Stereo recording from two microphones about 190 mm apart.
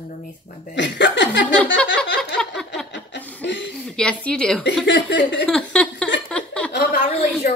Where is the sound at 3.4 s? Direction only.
70° left (ahead or behind).